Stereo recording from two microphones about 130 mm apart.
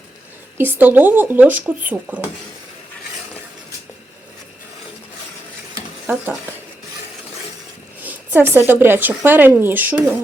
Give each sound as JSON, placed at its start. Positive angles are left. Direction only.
{"t": 0.5, "sound": "speech", "side_deg": -15}
{"t": 6.1, "sound": "speech", "side_deg": -15}
{"t": 8.0, "sound": "speech", "side_deg": -15}